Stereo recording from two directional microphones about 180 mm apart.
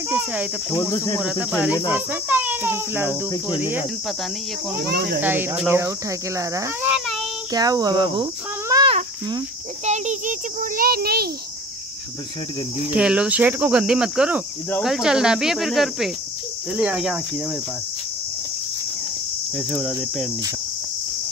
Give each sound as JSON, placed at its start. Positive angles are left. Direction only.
{"t": 0.1, "sound": "speech", "side_deg": -5}
{"t": 0.7, "sound": "cricket", "side_deg": 20}
{"t": 1.2, "sound": "cricket", "side_deg": -5}
{"t": 2.0, "sound": "speech", "side_deg": -10}
{"t": 4.8, "sound": "speech", "side_deg": -60}
{"t": 5.2, "sound": "speech", "side_deg": -10}
{"t": 6.9, "sound": "child singing", "side_deg": 0}
{"t": 7.5, "sound": "speech", "side_deg": -20}
{"t": 9.8, "sound": "a child's voice", "side_deg": -40}
{"t": 12.9, "sound": "cricket", "side_deg": -5}
{"t": 19.5, "sound": "cricket", "side_deg": -5}